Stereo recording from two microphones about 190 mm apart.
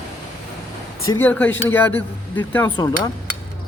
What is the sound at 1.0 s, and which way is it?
A man's voice, 15° left (ahead or behind).